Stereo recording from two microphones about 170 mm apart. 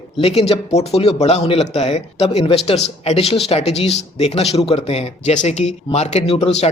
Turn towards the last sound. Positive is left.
turn(degrees=35)  # may be behind; listen again after turning